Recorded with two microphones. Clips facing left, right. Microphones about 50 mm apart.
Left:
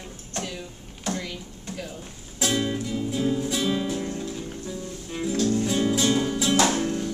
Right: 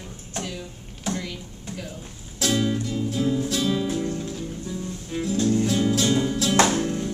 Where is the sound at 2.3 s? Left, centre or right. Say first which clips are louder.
Right 2 dB; centre.